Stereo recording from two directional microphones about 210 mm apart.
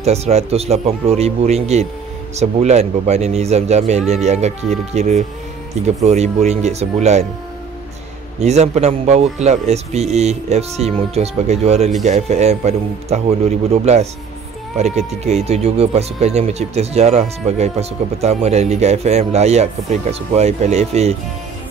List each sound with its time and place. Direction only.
0.0 s speech: 30° right (ahead or behind)
8.4 s speech: 30° right (ahead or behind)
14.8 s speech: 30° right (ahead or behind)